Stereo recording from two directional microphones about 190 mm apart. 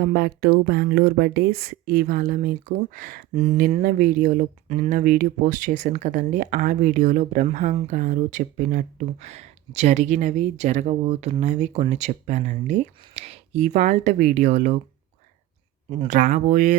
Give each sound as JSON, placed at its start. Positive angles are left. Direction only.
{"t": 0.0, "sound": "speech", "side_deg": -55}
{"t": 15.9, "sound": "speech", "side_deg": -40}